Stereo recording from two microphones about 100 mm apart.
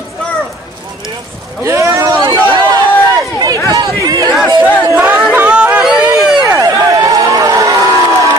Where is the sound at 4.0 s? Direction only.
35° right (ahead or behind).